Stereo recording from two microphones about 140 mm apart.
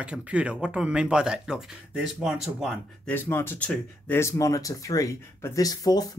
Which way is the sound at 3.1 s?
15° left (ahead or behind).